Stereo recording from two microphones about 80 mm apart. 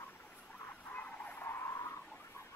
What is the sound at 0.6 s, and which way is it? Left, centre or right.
Vehicle, left.